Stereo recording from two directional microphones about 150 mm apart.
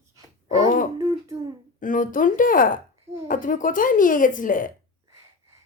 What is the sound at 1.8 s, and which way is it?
A woman's voice, 65° left (ahead or behind).